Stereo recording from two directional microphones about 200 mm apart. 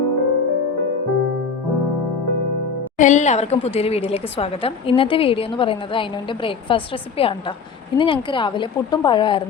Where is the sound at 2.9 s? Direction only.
40° left (ahead or behind).